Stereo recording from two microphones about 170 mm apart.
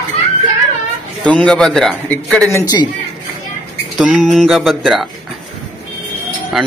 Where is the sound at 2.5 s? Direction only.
20° left (ahead or behind).